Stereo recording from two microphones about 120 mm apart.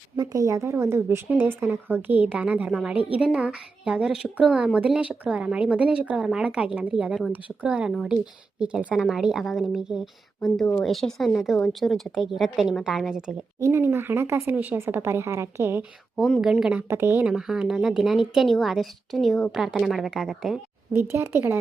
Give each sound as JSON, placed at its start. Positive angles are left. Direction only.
{"t": 0.2, "sound": "a woman's voice", "side_deg": -25}
{"t": 13.6, "sound": "speech", "side_deg": -25}
{"t": 15.8, "sound": "a woman's voice", "side_deg": -5}
{"t": 16.9, "sound": "speech", "side_deg": -20}
{"t": 17.2, "sound": "a woman's voice", "side_deg": -5}
{"t": 20.9, "sound": "a woman's voice", "side_deg": -20}